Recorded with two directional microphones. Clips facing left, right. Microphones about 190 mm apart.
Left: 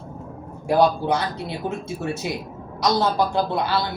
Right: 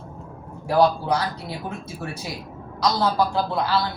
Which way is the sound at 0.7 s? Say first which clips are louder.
Left 1 dB; 25° left (ahead or behind).